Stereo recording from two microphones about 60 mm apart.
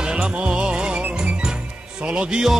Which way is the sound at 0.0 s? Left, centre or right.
Centre.